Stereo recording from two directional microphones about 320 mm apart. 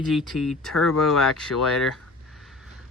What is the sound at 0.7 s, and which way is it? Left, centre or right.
Speech, left.